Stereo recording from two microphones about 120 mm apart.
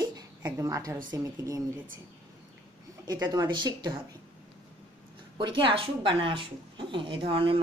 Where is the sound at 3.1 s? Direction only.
35° right (ahead or behind).